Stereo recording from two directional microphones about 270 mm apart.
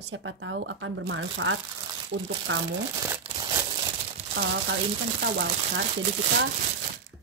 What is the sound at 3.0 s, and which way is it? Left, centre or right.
Crumpling, centre.